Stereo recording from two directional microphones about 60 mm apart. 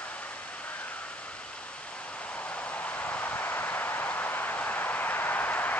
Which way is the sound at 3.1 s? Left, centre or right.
Left.